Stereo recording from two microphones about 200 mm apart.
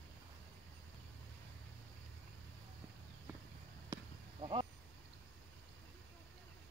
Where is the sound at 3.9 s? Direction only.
25° right (ahead or behind).